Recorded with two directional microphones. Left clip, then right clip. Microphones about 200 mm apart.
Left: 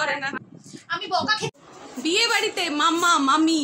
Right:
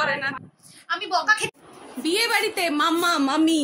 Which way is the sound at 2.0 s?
Centre (ahead or behind).